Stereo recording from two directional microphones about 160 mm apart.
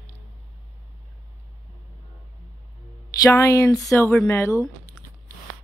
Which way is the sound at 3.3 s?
15° left (ahead or behind).